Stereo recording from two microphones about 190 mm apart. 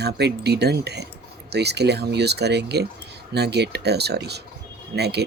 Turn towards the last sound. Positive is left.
turn(degrees=-60)  # may be behind; listen again after turning